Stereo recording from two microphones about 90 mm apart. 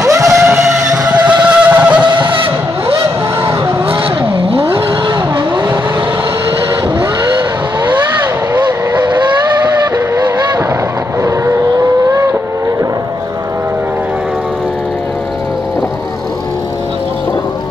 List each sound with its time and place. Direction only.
0.0 s a sound: 35° right (ahead or behind)
1.1 s vehicle: 15° right (ahead or behind)
2.0 s vehicle: 65° right (ahead or behind)
3.9 s vehicle: 90° right
7.8 s vehicle: 25° right (ahead or behind)
11.2 s vehicle: 35° right (ahead or behind)